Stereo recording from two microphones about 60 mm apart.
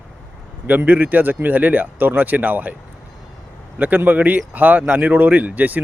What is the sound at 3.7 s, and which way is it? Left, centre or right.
Speech, right.